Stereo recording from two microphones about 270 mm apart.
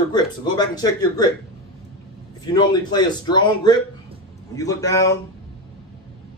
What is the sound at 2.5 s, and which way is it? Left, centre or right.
Speech, centre.